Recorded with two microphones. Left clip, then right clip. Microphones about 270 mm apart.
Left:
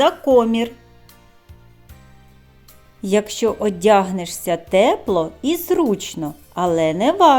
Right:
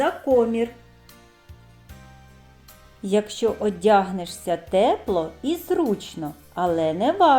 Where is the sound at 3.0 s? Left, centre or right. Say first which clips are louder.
Left 4 dB; left.